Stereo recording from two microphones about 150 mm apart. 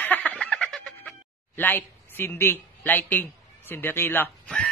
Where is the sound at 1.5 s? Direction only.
15° left (ahead or behind).